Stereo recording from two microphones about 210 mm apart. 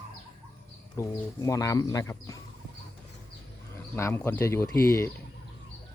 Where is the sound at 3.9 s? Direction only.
10° left (ahead or behind).